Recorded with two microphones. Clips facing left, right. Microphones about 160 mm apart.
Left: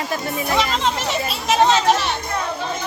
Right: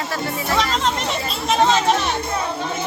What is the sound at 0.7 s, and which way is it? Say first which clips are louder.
Speech: even; centre (ahead or behind).